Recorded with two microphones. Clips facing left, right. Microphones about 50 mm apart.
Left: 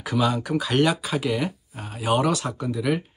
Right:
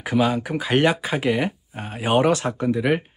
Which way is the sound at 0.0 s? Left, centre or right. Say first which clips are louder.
Right 3 dB; right.